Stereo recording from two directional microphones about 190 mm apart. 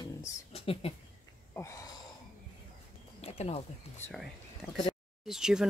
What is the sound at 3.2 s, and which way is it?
Speech, 35° left (ahead or behind).